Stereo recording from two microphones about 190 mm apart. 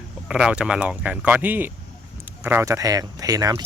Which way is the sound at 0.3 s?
5° right (ahead or behind).